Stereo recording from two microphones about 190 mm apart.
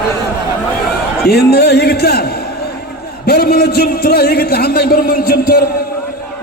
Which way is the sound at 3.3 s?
55° left (ahead or behind).